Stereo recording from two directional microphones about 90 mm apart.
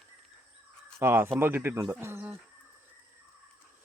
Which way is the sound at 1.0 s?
25° right (ahead or behind).